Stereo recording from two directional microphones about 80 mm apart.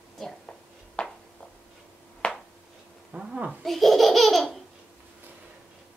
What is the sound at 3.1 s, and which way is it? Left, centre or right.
Speech, centre.